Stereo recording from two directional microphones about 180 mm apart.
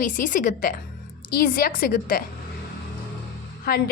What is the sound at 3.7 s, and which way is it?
Speech, 60° left (ahead or behind).